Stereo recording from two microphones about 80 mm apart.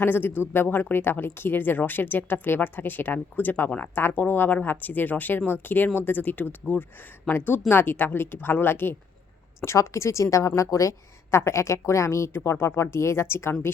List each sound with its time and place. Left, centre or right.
0.0 s a woman's voice: left